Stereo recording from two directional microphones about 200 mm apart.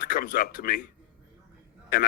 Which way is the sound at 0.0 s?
40° left (ahead or behind).